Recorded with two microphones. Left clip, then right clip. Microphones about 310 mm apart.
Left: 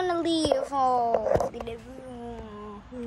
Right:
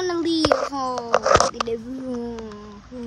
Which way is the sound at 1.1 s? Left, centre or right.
Left.